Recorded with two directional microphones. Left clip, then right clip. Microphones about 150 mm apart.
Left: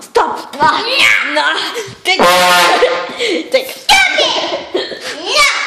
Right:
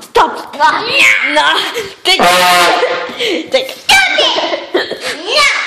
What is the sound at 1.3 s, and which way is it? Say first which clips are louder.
Speech: right 3 dB; 20° right (ahead or behind).